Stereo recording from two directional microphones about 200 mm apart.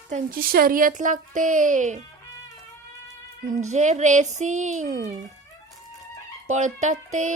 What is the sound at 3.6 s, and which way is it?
Speech, 35° right (ahead or behind).